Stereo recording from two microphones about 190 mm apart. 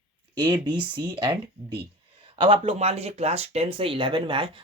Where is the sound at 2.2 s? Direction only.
25° right (ahead or behind).